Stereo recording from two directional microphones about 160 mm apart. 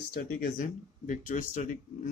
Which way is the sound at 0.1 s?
65° left (ahead or behind).